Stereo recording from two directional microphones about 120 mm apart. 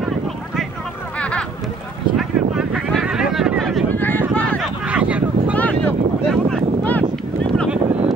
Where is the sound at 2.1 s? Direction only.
5° right (ahead or behind).